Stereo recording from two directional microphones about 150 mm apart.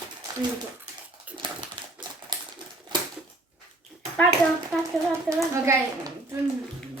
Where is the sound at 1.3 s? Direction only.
10° right (ahead or behind).